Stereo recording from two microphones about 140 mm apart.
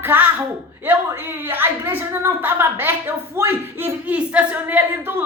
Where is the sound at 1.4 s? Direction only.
15° right (ahead or behind).